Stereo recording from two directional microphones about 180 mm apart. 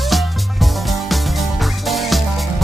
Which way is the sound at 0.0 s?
Centre (ahead or behind).